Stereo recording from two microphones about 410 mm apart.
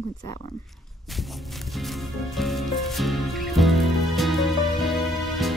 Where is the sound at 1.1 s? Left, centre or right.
Centre.